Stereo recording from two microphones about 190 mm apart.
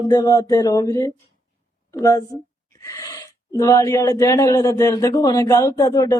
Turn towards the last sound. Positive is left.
turn(degrees=20)  # may be behind; listen again after turning